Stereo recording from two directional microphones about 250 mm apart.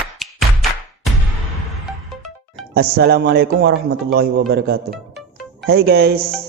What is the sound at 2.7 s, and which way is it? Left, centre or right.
A man's voice, right.